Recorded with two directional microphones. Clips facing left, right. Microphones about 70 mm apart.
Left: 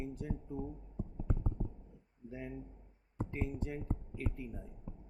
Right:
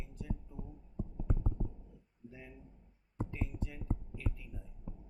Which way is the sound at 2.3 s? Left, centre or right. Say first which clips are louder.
Left 11 dB; left.